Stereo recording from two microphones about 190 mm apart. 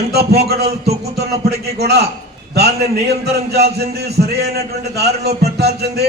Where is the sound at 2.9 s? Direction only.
55° right (ahead or behind).